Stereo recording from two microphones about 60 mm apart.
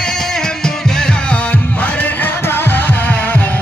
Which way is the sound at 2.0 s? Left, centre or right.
Left.